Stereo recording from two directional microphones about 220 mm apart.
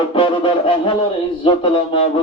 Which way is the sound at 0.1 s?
20° left (ahead or behind).